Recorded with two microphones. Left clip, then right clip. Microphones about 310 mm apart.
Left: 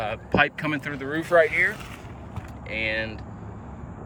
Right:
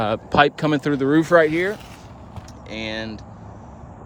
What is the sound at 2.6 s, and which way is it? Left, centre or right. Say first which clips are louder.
Speech: left 2 dB; centre.